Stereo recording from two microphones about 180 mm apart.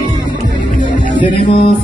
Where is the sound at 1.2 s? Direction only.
30° left (ahead or behind).